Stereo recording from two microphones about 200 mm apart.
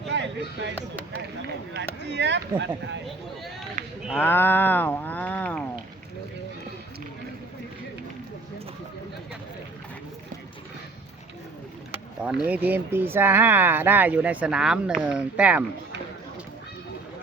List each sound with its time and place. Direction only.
0.1 s a sound: 60° right (ahead or behind)
1.7 s speech: 60° right (ahead or behind)
3.8 s speech: 35° right (ahead or behind)
4.2 s livestock: 10° left (ahead or behind)
11.9 s speech: 5° right (ahead or behind)